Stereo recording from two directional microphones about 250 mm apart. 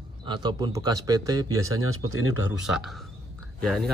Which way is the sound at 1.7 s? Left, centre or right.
Right.